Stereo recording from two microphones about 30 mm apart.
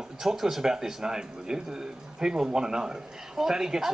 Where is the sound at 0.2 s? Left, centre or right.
Centre.